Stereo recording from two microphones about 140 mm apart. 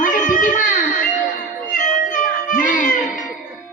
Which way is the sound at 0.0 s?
70° left (ahead or behind).